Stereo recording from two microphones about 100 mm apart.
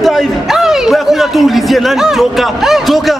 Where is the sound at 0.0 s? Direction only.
Centre (ahead or behind).